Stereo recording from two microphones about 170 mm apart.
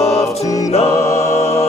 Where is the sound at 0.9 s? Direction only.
15° left (ahead or behind).